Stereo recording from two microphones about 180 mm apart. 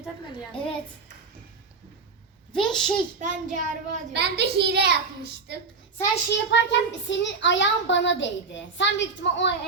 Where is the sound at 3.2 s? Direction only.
45° right (ahead or behind).